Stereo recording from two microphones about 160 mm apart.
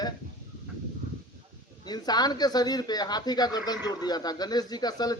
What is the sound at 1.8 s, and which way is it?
Speech, 25° left (ahead or behind).